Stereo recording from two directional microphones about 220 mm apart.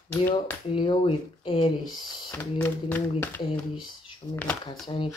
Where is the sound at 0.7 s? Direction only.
20° left (ahead or behind).